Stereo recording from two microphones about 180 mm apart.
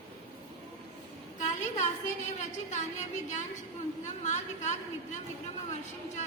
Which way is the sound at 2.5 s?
40° left (ahead or behind).